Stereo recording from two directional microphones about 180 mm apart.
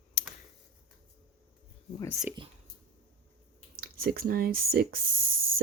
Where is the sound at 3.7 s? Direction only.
60° right (ahead or behind).